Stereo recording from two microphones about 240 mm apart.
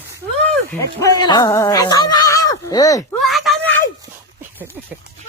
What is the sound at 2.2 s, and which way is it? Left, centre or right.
Neigh, centre.